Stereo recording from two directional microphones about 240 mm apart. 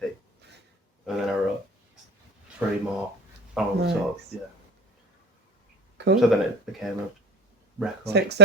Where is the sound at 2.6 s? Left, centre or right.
Centre.